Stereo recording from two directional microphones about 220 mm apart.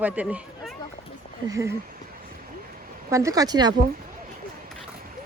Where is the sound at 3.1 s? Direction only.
15° right (ahead or behind).